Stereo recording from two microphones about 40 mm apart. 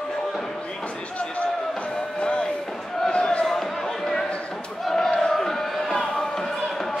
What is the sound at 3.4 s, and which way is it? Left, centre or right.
Basketball bounce, centre.